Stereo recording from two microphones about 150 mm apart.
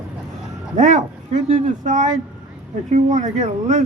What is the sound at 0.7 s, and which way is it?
Speech, 55° right (ahead or behind).